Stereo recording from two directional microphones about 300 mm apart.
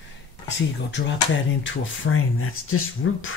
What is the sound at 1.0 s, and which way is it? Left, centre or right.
Speech, left.